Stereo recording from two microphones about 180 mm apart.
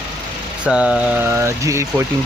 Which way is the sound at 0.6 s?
5° right (ahead or behind).